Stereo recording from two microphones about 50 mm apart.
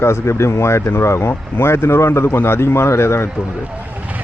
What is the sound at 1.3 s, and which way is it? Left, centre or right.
Speech, left.